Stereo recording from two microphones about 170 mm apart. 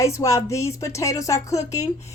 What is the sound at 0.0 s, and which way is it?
A woman's voice, 15° left (ahead or behind).